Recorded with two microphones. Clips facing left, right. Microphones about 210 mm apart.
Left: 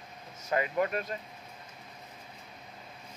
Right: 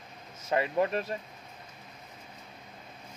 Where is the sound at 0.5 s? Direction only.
30° right (ahead or behind).